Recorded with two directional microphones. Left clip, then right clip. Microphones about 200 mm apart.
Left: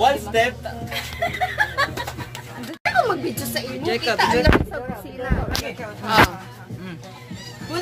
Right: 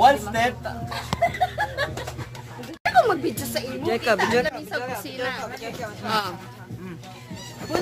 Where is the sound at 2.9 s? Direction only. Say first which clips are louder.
Right 2 dB; 35° right (ahead or behind).